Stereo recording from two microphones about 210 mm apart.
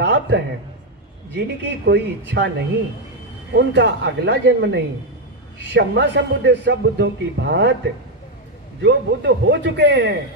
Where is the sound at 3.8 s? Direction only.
55° right (ahead or behind).